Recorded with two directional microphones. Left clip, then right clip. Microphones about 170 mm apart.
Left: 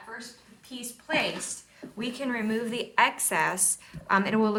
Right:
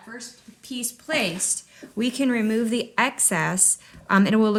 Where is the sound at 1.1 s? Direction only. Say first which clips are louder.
Right 3 dB; 90° right.